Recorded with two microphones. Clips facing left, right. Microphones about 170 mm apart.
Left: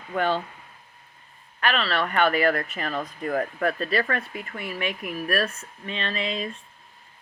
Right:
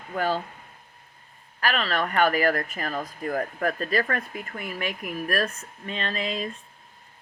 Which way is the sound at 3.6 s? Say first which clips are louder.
Left 1 dB; 40° right (ahead or behind).